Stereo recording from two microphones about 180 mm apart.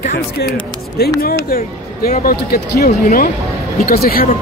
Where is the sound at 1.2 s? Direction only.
55° left (ahead or behind).